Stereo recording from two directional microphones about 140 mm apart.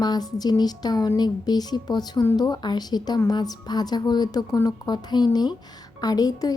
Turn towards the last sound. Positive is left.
turn(degrees=25)  # may be behind; listen again after turning